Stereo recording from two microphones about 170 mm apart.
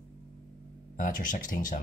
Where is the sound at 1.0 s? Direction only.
50° left (ahead or behind).